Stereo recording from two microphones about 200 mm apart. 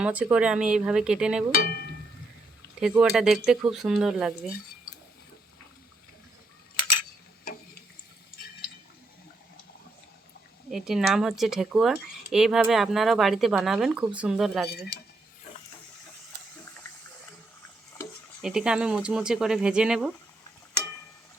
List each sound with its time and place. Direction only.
0.0 s speech: 5° right (ahead or behind)
1.5 s cowbell: 55° left (ahead or behind)
3.0 s speech: centre (ahead or behind)
10.7 s speech: centre (ahead or behind)
18.4 s speech: 5° right (ahead or behind)